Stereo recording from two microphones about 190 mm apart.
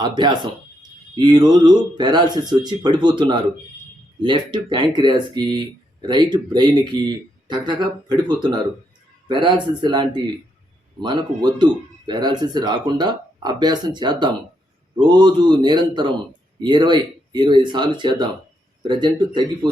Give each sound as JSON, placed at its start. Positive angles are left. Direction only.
{"t": 0.0, "sound": "speech", "side_deg": -25}